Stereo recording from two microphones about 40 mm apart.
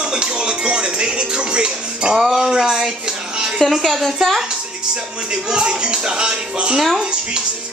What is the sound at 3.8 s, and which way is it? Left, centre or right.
Speech, centre.